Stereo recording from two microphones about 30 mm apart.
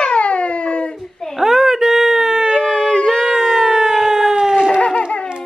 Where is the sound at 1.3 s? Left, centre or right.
Centre.